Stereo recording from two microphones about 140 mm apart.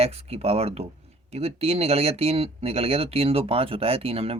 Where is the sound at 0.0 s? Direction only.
45° right (ahead or behind).